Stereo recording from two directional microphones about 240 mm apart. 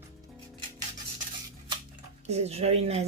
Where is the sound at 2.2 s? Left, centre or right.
Right.